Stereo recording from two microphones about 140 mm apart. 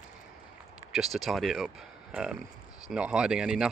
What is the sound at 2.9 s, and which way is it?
Speech, 5° right (ahead or behind).